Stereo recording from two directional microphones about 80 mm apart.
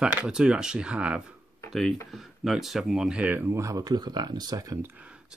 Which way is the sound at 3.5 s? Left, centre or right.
Right.